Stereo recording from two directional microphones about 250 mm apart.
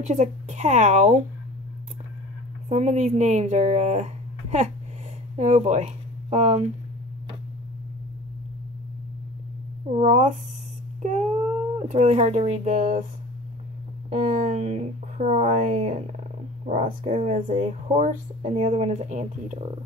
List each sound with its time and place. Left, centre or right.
0.0 s speech: right
2.7 s speech: right
9.8 s speech: right
11.0 s a sound: right
11.9 s speech: right
14.1 s speech: right